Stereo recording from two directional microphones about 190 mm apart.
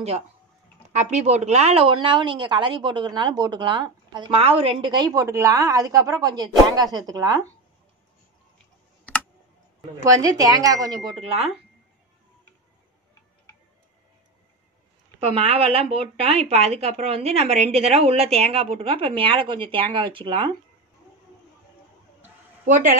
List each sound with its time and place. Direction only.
0.9 s a woman's voice: 35° right (ahead or behind); by 7.5 s 20° right (ahead or behind)
10.0 s speech: 20° right (ahead or behind)
11.1 s speech: 30° right (ahead or behind)
15.2 s speech: 30° right (ahead or behind)
22.7 s a woman's voice: 45° right (ahead or behind)